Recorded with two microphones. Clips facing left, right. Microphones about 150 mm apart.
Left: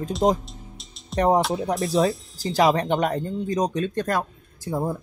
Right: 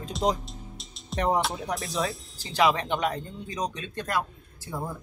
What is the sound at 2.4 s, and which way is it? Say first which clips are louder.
Speech: left 4 dB; 40° left (ahead or behind).